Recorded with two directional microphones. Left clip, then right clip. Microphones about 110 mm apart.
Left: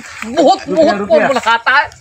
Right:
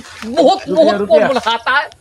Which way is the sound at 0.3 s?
25° right (ahead or behind).